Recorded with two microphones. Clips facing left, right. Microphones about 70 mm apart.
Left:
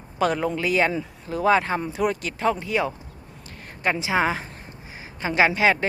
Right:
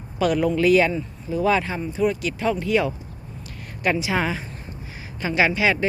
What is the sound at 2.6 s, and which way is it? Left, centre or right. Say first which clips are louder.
Speech: right 3 dB; left.